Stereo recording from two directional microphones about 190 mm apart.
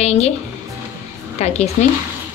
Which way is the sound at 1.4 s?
35° left (ahead or behind).